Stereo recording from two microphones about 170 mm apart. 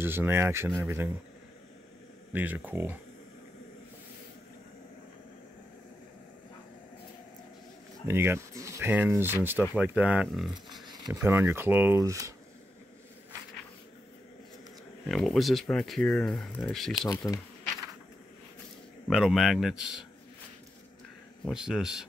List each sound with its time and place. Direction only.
0.0 s speech: 15° right (ahead or behind)
2.3 s speech: 10° right (ahead or behind)
8.1 s speech: 15° right (ahead or behind)
10.9 s speech: 20° right (ahead or behind)
15.0 s speech: centre (ahead or behind)
17.1 s speech: 20° left (ahead or behind)
19.0 s speech: centre (ahead or behind)
21.5 s speech: 5° right (ahead or behind)